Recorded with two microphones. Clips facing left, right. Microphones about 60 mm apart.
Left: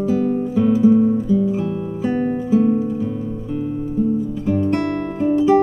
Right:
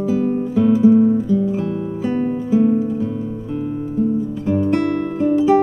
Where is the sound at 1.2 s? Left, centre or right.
Centre.